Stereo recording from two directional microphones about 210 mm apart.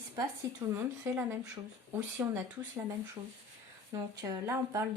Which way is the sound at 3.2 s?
20° right (ahead or behind).